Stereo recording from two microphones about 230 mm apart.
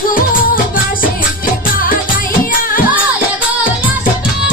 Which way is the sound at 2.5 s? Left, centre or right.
Left.